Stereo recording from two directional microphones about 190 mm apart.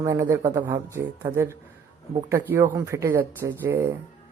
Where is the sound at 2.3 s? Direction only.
15° right (ahead or behind).